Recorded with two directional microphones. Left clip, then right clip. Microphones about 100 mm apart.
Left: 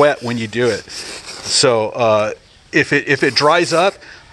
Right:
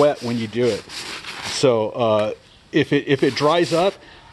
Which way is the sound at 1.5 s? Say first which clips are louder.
Left 4 dB; 25° right (ahead or behind).